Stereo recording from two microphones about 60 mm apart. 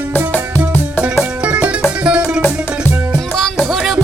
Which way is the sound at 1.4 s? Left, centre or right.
Right.